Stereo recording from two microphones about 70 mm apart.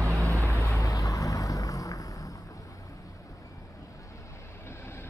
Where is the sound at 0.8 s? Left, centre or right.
Left.